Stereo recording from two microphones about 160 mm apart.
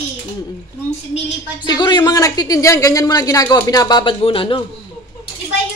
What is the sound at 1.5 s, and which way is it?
A woman's voice, 25° left (ahead or behind).